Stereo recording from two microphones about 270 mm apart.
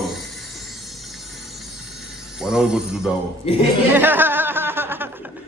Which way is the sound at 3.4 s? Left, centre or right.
Left.